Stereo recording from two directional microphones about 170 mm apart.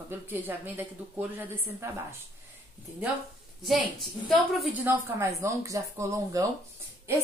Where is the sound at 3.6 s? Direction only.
Centre (ahead or behind).